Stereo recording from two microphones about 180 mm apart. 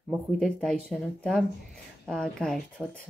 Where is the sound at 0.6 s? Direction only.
5° left (ahead or behind).